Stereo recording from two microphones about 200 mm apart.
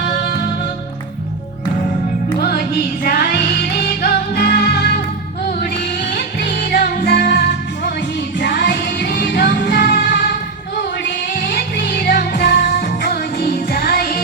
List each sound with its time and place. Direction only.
2.4 s music: 50° left (ahead or behind)
6.1 s music: 45° left (ahead or behind)
11.3 s music: 55° left (ahead or behind)